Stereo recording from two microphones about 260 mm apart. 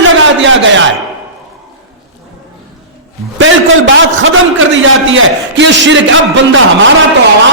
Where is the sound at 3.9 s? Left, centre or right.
Right.